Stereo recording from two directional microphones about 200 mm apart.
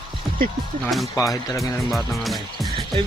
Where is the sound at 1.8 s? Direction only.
Centre (ahead or behind).